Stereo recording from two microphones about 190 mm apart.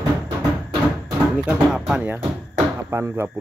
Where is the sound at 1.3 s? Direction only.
5° right (ahead or behind).